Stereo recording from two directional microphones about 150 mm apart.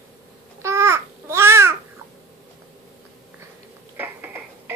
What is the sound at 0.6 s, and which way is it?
Babbling, 20° right (ahead or behind).